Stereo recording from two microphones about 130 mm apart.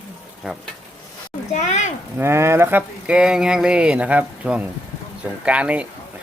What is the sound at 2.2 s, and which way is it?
Speech, 20° right (ahead or behind).